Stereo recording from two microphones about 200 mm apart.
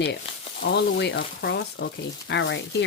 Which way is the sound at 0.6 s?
55° left (ahead or behind).